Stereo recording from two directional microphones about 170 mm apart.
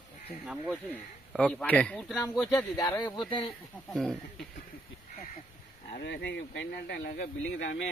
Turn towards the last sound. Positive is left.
turn(degrees=85)